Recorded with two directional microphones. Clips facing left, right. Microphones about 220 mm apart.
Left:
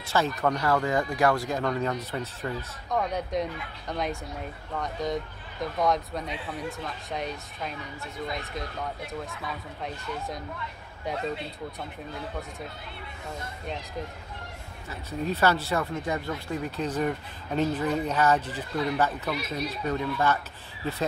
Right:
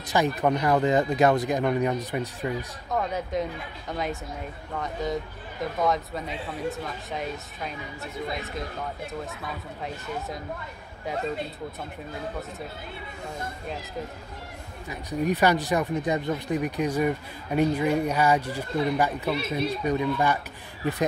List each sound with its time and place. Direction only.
0.0 s speech: 15° right (ahead or behind)
2.9 s speech: centre (ahead or behind)
14.9 s speech: 15° right (ahead or behind)